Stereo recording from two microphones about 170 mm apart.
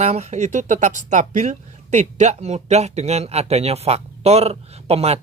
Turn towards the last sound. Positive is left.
turn(degrees=-35)  # may be behind; listen again after turning